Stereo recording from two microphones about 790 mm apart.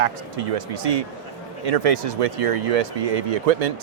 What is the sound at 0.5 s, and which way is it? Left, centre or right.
Speech, right.